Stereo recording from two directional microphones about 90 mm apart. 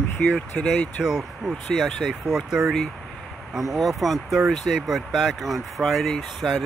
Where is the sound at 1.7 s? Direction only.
Centre (ahead or behind).